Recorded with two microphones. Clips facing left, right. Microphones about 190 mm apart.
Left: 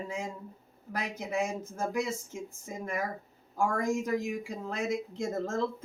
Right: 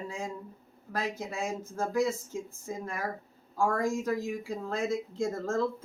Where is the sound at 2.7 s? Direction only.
20° left (ahead or behind).